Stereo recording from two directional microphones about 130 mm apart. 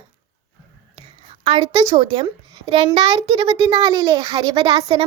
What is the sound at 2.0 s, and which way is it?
A child's voice, 35° right (ahead or behind).